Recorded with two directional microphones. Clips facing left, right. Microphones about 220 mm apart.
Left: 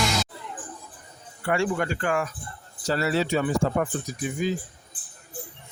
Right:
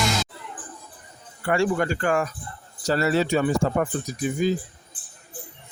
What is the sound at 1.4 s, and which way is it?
Speech, 40° right (ahead or behind).